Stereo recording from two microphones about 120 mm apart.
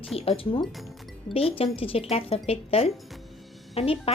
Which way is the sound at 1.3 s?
50° left (ahead or behind).